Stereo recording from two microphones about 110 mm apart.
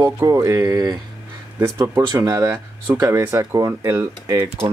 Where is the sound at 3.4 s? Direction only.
30° right (ahead or behind).